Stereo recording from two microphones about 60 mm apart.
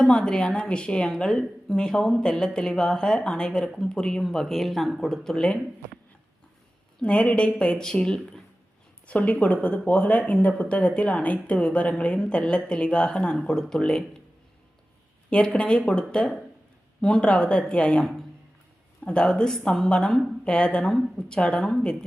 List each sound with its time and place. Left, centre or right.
0.1 s speech: centre
7.0 s speech: centre
9.0 s a woman's voice: left
15.4 s speech: centre